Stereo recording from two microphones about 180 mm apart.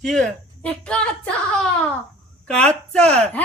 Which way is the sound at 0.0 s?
5° left (ahead or behind).